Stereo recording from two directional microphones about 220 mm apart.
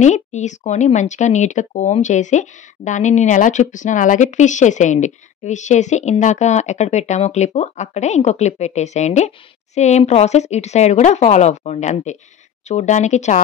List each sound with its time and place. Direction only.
0.0 s speech: 30° left (ahead or behind)